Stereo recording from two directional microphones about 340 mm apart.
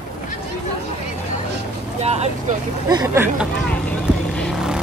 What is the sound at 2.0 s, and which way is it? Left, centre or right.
Vehicle, centre.